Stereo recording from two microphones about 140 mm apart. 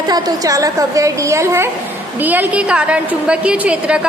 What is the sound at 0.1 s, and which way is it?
A woman's voice, 25° right (ahead or behind).